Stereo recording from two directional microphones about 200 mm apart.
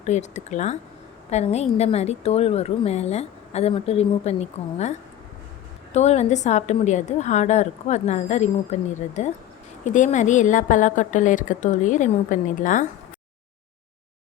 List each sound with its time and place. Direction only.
0.0 s a woman's voice: 35° left (ahead or behind)